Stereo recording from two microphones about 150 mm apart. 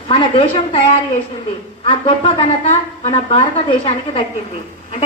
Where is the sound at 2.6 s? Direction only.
50° left (ahead or behind).